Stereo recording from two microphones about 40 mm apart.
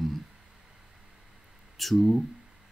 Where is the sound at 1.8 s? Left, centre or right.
Centre.